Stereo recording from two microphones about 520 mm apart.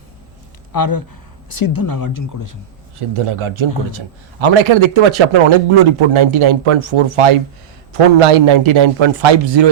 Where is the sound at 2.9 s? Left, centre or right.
Right.